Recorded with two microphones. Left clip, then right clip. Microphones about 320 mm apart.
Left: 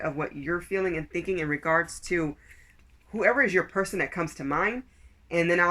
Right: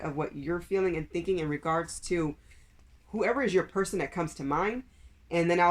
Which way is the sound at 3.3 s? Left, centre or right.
Centre.